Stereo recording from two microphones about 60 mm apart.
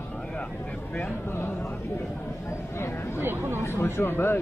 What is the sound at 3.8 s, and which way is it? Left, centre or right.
Speech, left.